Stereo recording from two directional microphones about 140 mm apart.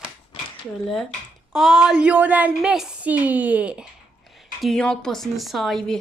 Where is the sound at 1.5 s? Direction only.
Centre (ahead or behind).